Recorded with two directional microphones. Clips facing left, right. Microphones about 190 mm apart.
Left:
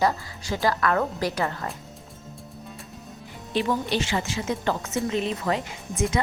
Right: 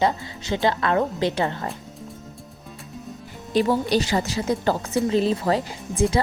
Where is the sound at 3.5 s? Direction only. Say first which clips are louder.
Right 5 dB; 40° right (ahead or behind).